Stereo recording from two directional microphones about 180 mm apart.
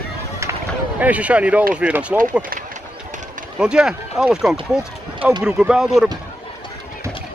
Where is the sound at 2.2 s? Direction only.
50° right (ahead or behind).